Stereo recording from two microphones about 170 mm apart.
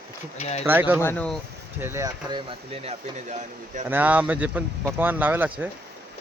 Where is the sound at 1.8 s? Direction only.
15° right (ahead or behind).